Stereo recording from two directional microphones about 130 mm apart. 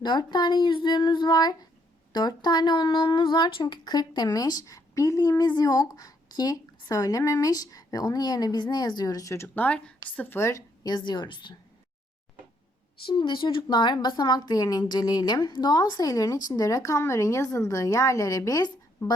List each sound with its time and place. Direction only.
0.0 s a woman's voice: 35° left (ahead or behind)
9.6 s a woman's voice: 10° left (ahead or behind)
10.8 s speech: 35° left (ahead or behind)
13.1 s a woman's voice: 40° left (ahead or behind)